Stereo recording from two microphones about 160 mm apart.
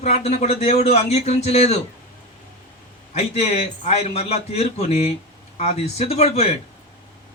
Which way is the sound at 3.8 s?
45° left (ahead or behind).